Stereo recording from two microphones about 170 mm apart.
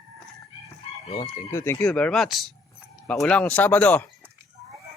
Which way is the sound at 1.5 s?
15° left (ahead or behind).